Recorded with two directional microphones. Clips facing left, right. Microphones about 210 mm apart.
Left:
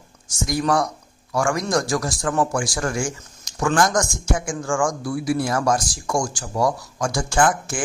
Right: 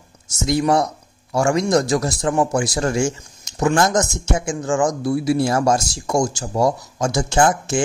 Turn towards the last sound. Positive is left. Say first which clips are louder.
# right 3 dB
turn(degrees=-25)  # may be behind; listen again after turning